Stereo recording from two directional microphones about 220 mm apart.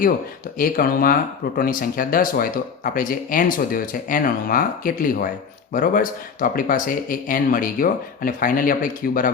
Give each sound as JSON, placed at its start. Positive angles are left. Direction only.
{"t": 0.6, "sound": "speech", "side_deg": 40}